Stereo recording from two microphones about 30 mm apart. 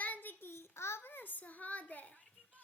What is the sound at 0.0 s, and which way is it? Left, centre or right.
Child singing, left.